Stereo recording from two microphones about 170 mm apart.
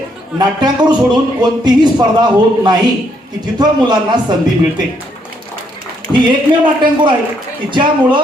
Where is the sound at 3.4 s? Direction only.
25° right (ahead or behind).